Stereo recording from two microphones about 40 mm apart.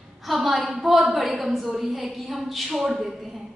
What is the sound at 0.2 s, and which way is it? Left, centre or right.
A woman's voice, centre.